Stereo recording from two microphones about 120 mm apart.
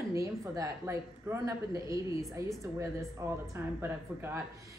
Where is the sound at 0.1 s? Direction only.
25° right (ahead or behind).